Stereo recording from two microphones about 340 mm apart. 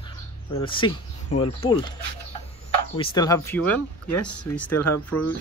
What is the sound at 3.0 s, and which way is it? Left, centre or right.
Speech, centre.